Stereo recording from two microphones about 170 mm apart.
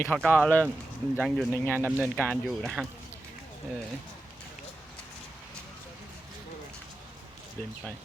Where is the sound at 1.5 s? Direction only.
10° left (ahead or behind).